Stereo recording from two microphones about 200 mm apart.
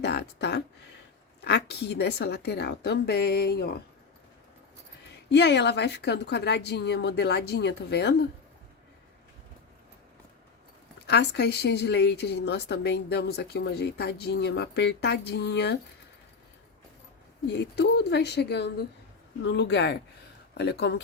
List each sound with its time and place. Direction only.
0.0 s speech: 55° left (ahead or behind)
5.3 s speech: 60° left (ahead or behind)
11.0 s speech: 55° left (ahead or behind)
17.6 s speech: 55° left (ahead or behind)